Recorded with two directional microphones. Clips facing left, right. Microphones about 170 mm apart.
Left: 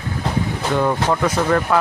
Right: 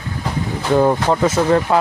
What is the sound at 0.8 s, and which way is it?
Speech, 30° right (ahead or behind).